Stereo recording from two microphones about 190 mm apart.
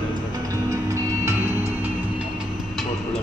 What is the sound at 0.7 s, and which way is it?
Music, 20° right (ahead or behind).